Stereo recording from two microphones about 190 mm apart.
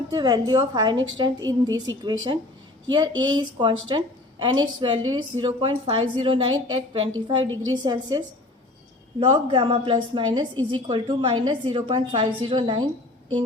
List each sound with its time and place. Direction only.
0.1 s a woman's voice: 20° right (ahead or behind)
7.4 s a woman's voice: 90° right
7.7 s a woman's voice: 20° right (ahead or behind)
9.2 s a woman's voice: 25° right (ahead or behind)